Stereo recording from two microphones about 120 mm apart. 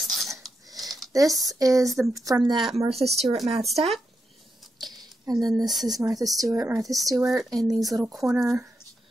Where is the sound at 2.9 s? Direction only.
60° right (ahead or behind).